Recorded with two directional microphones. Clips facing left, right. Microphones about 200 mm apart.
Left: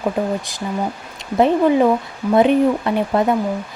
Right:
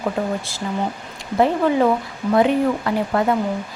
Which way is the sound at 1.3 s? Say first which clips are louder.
Left 3 dB; 15° left (ahead or behind).